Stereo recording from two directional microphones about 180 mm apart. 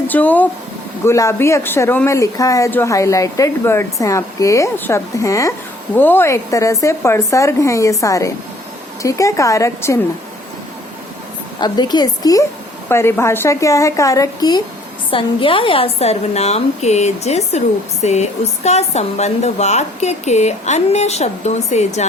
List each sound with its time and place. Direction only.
0.1 s speech: 10° left (ahead or behind)
11.6 s a woman's voice: 25° left (ahead or behind); by 22.0 s 40° left (ahead or behind)